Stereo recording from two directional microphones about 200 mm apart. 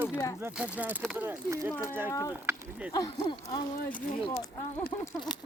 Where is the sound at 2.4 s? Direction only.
15° right (ahead or behind).